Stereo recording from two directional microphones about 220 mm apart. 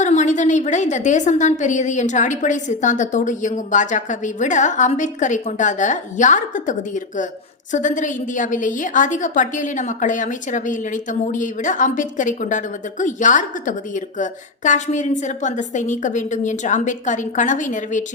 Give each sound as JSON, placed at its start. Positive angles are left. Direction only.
{"t": 0.0, "sound": "a woman's voice", "side_deg": 35}